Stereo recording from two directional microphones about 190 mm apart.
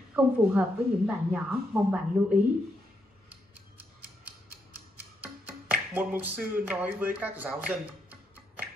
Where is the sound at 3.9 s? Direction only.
10° right (ahead or behind).